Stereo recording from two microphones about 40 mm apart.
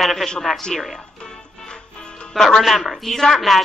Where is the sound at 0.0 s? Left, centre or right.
Centre.